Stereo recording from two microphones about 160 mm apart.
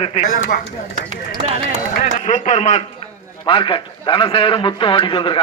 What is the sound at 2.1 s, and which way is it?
Speech, 50° left (ahead or behind).